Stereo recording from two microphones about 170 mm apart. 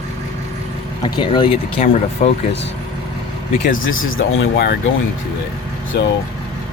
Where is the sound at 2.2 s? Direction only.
50° left (ahead or behind).